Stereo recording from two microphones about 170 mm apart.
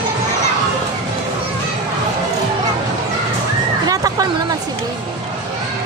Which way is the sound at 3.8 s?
20° right (ahead or behind).